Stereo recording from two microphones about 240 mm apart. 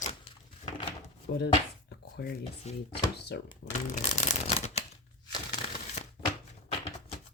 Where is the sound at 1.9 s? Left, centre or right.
Left.